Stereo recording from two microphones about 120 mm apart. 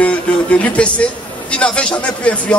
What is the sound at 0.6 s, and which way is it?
A man's voice, 10° left (ahead or behind).